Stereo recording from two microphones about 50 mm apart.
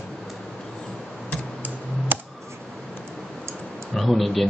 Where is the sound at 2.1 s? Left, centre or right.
Right.